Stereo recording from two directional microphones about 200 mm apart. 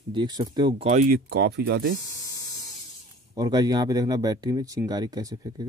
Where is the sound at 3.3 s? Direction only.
20° right (ahead or behind).